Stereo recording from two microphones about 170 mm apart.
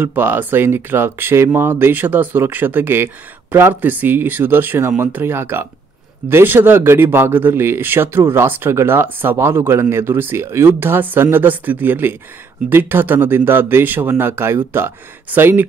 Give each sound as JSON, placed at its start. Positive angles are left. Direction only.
{"t": 0.0, "sound": "speech", "side_deg": -10}